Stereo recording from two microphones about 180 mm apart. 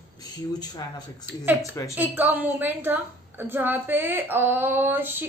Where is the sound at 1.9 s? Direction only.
10° right (ahead or behind).